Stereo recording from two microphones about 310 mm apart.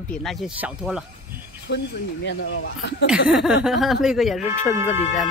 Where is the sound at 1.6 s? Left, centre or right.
Left.